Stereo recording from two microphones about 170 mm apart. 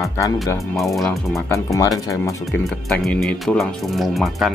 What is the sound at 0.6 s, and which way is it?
Speech, centre (ahead or behind).